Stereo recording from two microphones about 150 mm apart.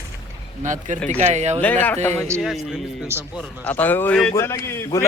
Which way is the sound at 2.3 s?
Centre (ahead or behind).